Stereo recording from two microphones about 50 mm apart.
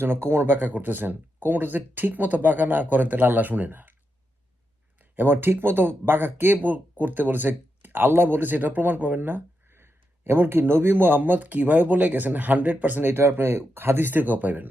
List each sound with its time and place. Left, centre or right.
0.0 s speech: right
0.6 s speech: right
5.1 s speech: right
13.1 s speech: right